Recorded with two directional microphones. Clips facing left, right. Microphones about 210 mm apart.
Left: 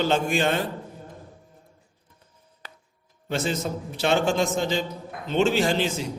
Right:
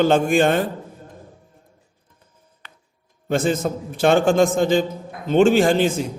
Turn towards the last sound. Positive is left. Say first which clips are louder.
# right 7 dB
turn(degrees=-50)  # may be behind; listen again after turning